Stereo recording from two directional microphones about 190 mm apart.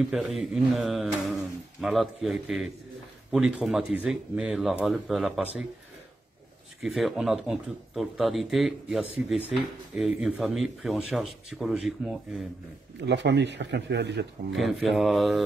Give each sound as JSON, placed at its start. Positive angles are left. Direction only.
{"t": 0.0, "sound": "speech", "side_deg": 0}
{"t": 6.8, "sound": "speech", "side_deg": 0}
{"t": 13.0, "sound": "a man's voice", "side_deg": -65}
{"t": 14.6, "sound": "speech", "side_deg": 0}